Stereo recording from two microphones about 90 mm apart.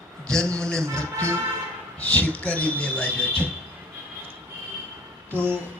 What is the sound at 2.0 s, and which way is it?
Speech, 15° left (ahead or behind).